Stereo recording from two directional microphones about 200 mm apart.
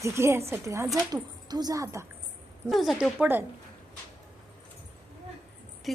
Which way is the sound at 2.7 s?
Centre (ahead or behind).